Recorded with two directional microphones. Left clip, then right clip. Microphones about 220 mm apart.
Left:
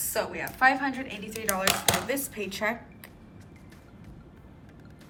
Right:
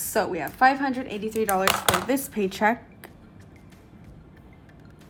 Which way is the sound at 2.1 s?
30° right (ahead or behind).